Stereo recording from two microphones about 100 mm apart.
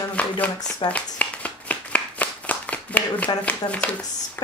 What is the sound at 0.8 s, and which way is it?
Clapping, 15° left (ahead or behind).